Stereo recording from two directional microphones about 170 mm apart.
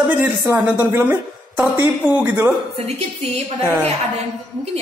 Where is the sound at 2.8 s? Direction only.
40° right (ahead or behind).